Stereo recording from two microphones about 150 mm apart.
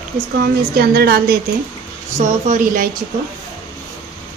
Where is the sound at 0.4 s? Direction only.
90° right.